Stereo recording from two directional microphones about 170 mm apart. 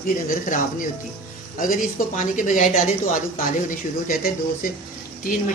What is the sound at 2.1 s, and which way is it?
Speech, 50° left (ahead or behind).